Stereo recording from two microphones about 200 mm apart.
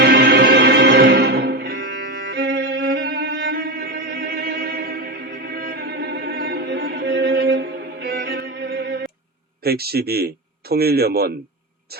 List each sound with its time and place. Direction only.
0.0 s music: 50° right (ahead or behind)
9.6 s a man's voice: 50° right (ahead or behind)